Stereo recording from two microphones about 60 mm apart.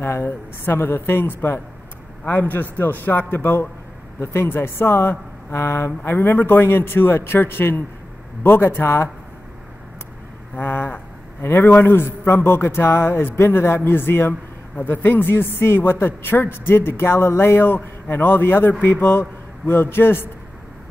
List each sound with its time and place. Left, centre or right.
0.0 s a woman's voice: left
10.5 s a sound: left
11.4 s a woman's voice: left